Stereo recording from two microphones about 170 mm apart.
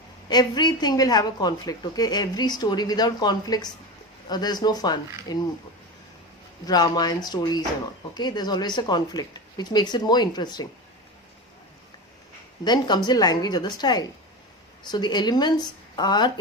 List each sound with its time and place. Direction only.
0.3 s a woman's voice: 25° left (ahead or behind)
6.7 s a woman's voice: 25° left (ahead or behind)
12.6 s a woman's voice: 25° left (ahead or behind)